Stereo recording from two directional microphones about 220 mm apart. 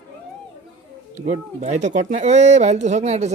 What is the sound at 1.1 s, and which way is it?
Speech, 30° right (ahead or behind).